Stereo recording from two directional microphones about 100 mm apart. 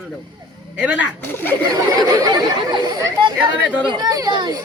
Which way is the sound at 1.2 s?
20° left (ahead or behind).